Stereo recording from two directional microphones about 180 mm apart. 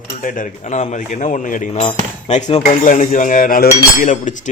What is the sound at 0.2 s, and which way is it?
A man's voice, 45° left (ahead or behind).